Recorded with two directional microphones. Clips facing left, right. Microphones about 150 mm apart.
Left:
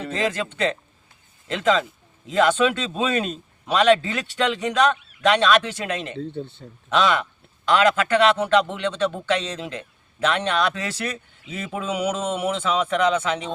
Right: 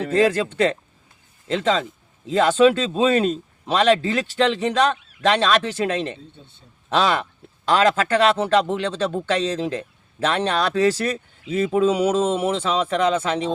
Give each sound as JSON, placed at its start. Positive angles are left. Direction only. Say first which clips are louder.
{"t": 1.5, "sound": "speech", "louder": "even", "side_deg": -30}
{"t": 6.1, "sound": "speech", "louder": "left 14 dB", "side_deg": 70}
{"t": 6.9, "sound": "speech", "louder": "even", "side_deg": -35}